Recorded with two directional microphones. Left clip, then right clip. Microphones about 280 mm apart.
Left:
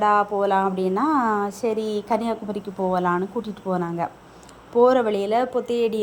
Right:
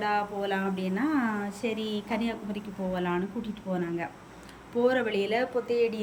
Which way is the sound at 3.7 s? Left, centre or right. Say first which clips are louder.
Left 8 dB; left.